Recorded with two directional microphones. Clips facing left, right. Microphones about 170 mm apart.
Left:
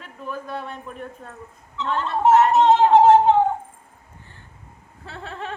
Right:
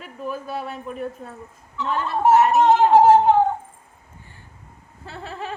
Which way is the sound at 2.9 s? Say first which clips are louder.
Even; 25° left (ahead or behind).